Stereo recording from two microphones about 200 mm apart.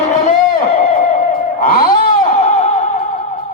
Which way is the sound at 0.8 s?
40° left (ahead or behind).